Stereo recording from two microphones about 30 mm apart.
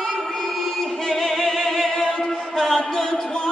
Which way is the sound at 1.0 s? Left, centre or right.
Centre.